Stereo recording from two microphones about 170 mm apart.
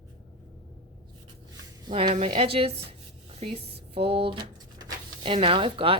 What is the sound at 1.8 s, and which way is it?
A woman's voice, 25° right (ahead or behind).